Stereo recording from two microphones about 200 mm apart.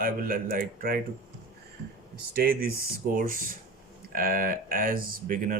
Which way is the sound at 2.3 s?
50° right (ahead or behind).